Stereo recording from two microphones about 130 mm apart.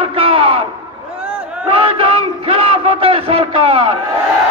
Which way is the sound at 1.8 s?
45° right (ahead or behind).